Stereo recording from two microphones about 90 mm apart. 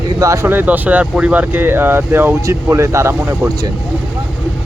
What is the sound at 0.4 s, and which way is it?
Speech, 20° right (ahead or behind).